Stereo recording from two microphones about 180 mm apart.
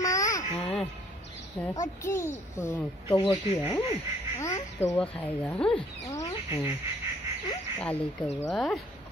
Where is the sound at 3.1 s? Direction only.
30° left (ahead or behind).